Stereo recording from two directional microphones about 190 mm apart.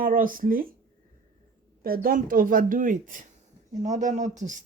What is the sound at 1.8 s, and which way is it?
Speech, 50° right (ahead or behind).